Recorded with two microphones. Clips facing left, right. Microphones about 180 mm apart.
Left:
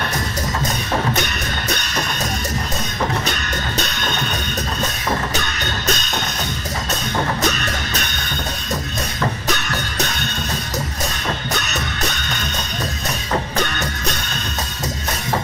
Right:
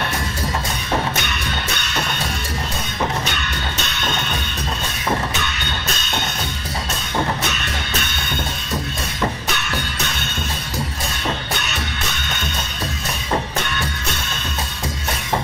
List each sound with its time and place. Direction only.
1.1 s music: 40° left (ahead or behind)
3.3 s music: 40° left (ahead or behind)
5.3 s music: 40° left (ahead or behind)
7.4 s music: 40° left (ahead or behind)
9.5 s music: 40° left (ahead or behind)